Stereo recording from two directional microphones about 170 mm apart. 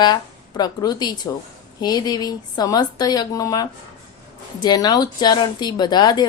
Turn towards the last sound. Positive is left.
turn(degrees=25)  # may be behind; listen again after turning